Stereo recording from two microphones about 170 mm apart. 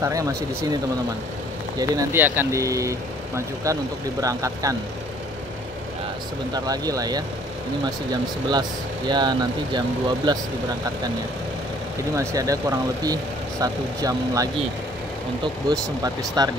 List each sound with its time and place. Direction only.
0.0 s speech: 20° right (ahead or behind)
1.8 s speech: 15° right (ahead or behind)
6.5 s speech: 20° right (ahead or behind)
12.2 s speech: 20° right (ahead or behind)